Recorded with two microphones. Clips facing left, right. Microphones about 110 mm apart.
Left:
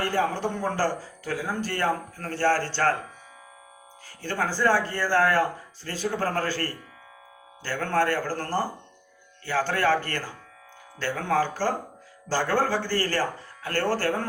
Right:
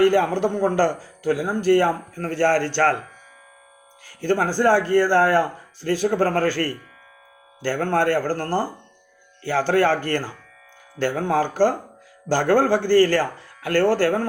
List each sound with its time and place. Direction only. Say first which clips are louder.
0.1 s speech: right 6 dB; 60° right (ahead or behind)
4.2 s speech: right 6 dB; 60° right (ahead or behind)
5.1 s speech: right 2 dB; 30° right (ahead or behind)
5.8 s speech: right 11 dB; 60° right (ahead or behind)
6.1 s speech: right 5 dB; 45° right (ahead or behind)
7.6 s speech: right 4 dB; 50° right (ahead or behind)
10.9 s speech: right 4 dB; 55° right (ahead or behind)
13.7 s speech: right 8 dB; 40° left (ahead or behind)